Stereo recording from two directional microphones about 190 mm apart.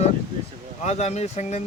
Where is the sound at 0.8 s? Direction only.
35° left (ahead or behind).